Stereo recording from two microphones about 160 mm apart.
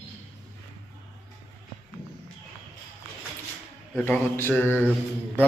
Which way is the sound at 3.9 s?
10° left (ahead or behind).